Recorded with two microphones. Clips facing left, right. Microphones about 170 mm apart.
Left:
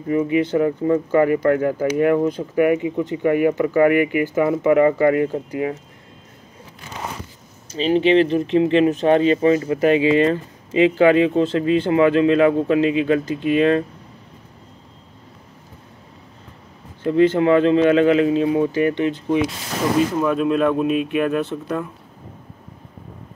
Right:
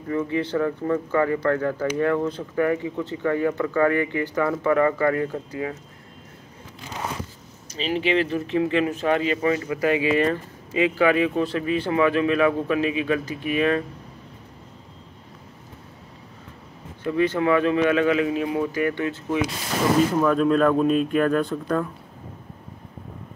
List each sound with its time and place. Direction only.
0.1 s speech: 15° left (ahead or behind)
7.7 s speech: 30° left (ahead or behind)
17.0 s speech: 30° left (ahead or behind); by 21.5 s 10° left (ahead or behind)